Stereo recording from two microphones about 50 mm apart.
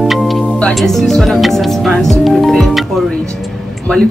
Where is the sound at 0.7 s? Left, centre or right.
Centre.